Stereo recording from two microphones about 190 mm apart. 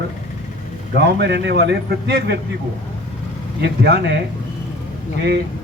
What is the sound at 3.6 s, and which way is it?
Speech, 60° right (ahead or behind).